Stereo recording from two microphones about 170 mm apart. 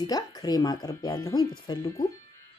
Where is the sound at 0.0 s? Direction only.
20° left (ahead or behind).